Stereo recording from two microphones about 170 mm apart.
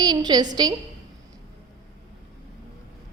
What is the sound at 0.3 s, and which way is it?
Speech, 25° right (ahead or behind).